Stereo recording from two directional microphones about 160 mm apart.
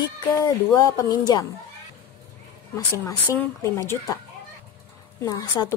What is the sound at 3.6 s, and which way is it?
Speech, 20° left (ahead or behind).